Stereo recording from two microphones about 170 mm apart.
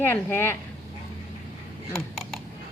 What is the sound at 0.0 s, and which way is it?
Speech, 10° left (ahead or behind).